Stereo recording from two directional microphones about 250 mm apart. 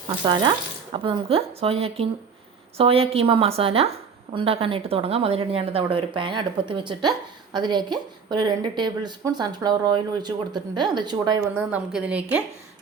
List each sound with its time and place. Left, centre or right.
0.3 s a woman's voice: centre
11.5 s a woman's voice: centre